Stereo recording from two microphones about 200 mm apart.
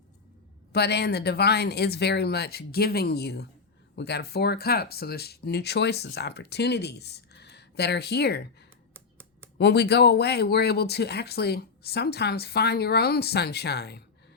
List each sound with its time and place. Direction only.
0.7 s speech: 55° left (ahead or behind)
8.9 s finger snapping: 10° right (ahead or behind)
9.6 s speech: 55° left (ahead or behind)